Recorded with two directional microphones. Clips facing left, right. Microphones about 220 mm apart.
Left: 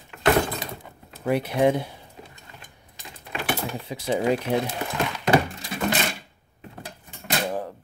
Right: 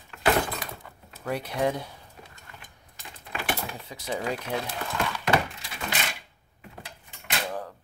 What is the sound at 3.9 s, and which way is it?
Speech, 25° left (ahead or behind).